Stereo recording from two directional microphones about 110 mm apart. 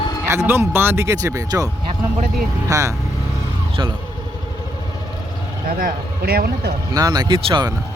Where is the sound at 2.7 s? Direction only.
30° right (ahead or behind).